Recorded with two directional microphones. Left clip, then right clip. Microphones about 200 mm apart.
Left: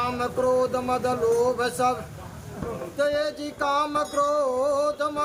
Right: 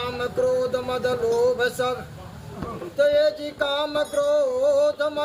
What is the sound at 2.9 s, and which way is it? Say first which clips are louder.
Music: right 6 dB; 10° left (ahead or behind).